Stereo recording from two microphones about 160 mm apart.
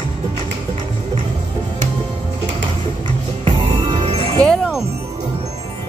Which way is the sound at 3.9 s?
40° right (ahead or behind).